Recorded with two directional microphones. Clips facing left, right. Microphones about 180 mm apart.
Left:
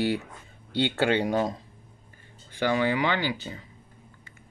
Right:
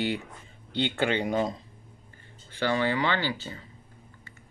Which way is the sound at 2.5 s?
15° left (ahead or behind).